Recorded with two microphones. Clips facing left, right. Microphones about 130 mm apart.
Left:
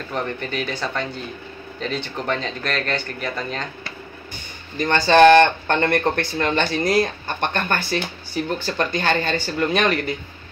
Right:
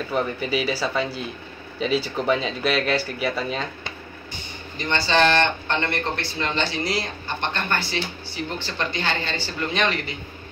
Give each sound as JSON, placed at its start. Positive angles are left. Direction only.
{"t": 0.1, "sound": "speech", "side_deg": -5}
{"t": 4.7, "sound": "speech", "side_deg": 50}